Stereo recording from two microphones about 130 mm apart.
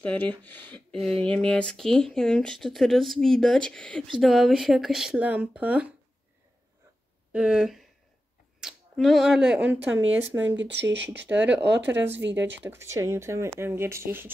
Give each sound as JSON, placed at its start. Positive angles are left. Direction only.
{"t": 0.0, "sound": "speech", "side_deg": 10}
{"t": 7.3, "sound": "speech", "side_deg": -5}